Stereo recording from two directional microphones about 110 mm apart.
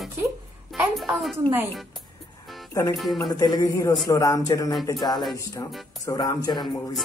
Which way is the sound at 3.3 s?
35° left (ahead or behind).